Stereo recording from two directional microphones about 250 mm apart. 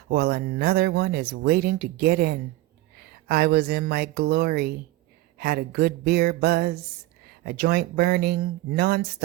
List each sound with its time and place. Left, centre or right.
0.1 s speech: right